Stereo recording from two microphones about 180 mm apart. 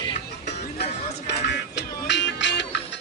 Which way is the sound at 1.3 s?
75° left (ahead or behind).